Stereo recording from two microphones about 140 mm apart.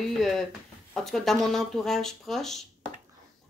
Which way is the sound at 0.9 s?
Centre (ahead or behind).